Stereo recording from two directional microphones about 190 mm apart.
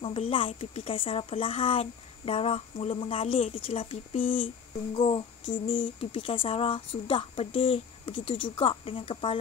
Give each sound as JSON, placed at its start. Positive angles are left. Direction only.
{"t": 0.0, "sound": "speech", "side_deg": 30}
{"t": 4.9, "sound": "a sound", "side_deg": 25}
{"t": 5.7, "sound": "speech", "side_deg": 25}